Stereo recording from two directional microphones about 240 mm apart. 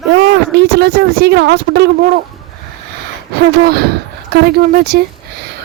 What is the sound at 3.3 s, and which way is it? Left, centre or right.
Speech, right.